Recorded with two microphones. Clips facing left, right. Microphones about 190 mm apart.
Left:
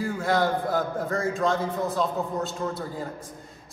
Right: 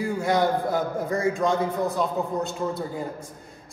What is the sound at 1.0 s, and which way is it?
A man's voice, 15° right (ahead or behind).